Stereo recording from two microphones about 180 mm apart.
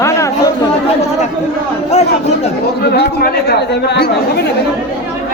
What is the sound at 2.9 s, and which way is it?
A man's voice, 60° left (ahead or behind).